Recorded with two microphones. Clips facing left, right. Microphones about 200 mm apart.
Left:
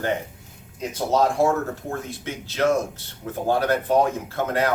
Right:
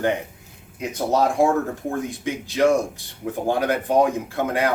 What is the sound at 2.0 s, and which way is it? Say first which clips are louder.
Speech: right 5 dB; 15° right (ahead or behind).